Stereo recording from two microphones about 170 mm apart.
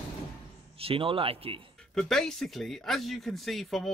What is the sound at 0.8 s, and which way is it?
Speech, 30° right (ahead or behind).